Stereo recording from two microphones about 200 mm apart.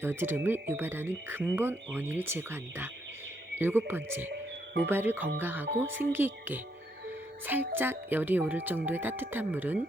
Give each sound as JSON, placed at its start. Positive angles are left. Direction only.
{"t": 0.0, "sound": "speech", "side_deg": -10}
{"t": 4.3, "sound": "music", "side_deg": -60}
{"t": 4.9, "sound": "speech", "side_deg": -10}
{"t": 7.7, "sound": "speech", "side_deg": -10}